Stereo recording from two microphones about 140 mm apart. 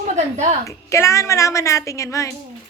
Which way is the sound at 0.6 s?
20° left (ahead or behind).